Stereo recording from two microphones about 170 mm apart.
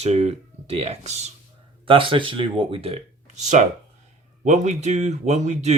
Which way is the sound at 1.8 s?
30° right (ahead or behind).